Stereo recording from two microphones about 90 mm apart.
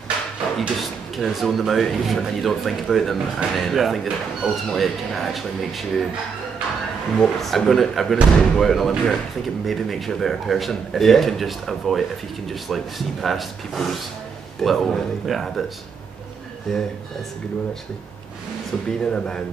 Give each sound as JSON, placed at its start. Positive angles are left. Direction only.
{"t": 0.6, "sound": "a man's voice", "side_deg": 0}
{"t": 7.2, "sound": "a man's voice", "side_deg": 5}
{"t": 16.7, "sound": "a man's voice", "side_deg": 5}
{"t": 18.9, "sound": "speech", "side_deg": 10}